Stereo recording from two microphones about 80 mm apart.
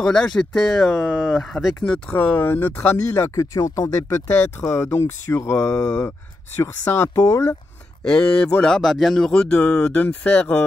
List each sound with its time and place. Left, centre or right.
0.0 s speech: centre
0.9 s speech: centre
1.4 s speech: centre
1.8 s speech: centre
2.1 s speech: left
3.1 s speech: left
7.2 s speech: left
8.0 s speech: centre